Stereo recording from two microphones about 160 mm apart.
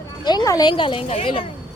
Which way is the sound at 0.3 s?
25° left (ahead or behind).